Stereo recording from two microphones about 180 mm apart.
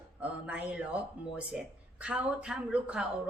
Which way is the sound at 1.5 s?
5° right (ahead or behind).